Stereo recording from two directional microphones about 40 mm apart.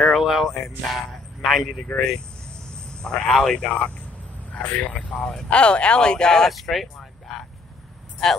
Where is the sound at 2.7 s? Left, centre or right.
Left.